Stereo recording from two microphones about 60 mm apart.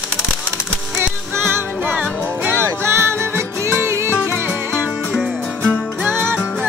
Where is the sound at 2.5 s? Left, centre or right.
Right.